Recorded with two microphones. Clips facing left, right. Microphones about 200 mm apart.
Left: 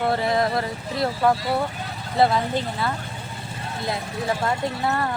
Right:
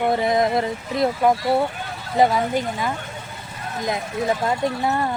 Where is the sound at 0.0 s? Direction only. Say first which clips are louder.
Right 3 dB; 15° right (ahead or behind).